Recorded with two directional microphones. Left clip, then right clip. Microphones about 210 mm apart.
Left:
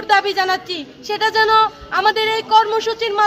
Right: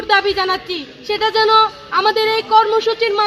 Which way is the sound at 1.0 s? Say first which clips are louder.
Right 1 dB; 15° left (ahead or behind).